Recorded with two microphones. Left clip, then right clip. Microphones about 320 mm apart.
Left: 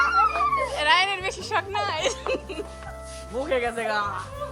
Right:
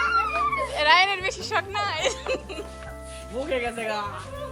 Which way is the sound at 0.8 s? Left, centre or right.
Centre.